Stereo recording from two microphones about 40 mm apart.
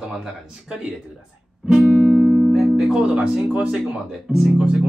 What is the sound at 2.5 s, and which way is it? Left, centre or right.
Music, centre.